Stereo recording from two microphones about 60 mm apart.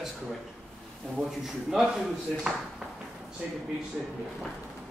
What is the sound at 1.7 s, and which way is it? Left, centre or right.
Speech, centre.